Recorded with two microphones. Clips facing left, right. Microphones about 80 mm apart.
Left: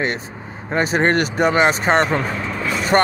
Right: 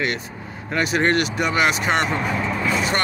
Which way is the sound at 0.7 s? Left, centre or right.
Left.